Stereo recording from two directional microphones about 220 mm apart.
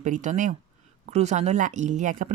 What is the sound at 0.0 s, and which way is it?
Speech, 35° right (ahead or behind).